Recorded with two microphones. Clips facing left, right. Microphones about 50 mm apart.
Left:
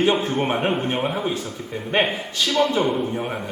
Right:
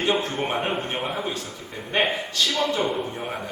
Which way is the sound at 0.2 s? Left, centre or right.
Centre.